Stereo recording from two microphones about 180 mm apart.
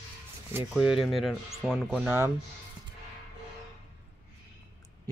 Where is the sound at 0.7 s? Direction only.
Centre (ahead or behind).